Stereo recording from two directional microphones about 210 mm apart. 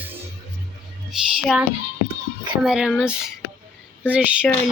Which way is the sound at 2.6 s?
5° right (ahead or behind).